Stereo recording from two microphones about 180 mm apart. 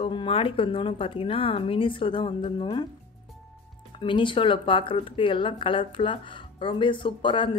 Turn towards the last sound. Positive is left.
turn(degrees=25)  # may be behind; listen again after turning